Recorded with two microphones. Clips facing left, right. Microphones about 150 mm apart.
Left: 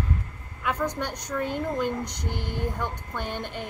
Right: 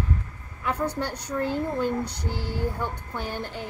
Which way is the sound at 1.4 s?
20° left (ahead or behind).